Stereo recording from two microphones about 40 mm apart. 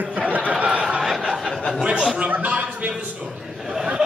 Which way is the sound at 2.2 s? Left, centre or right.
Right.